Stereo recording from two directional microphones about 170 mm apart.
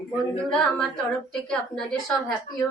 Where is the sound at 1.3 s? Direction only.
5° left (ahead or behind).